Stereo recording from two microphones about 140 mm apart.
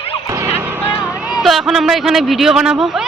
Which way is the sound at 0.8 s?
20° left (ahead or behind).